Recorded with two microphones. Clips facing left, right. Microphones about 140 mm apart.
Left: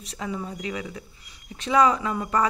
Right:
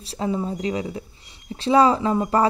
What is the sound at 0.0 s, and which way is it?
Speech, 30° right (ahead or behind).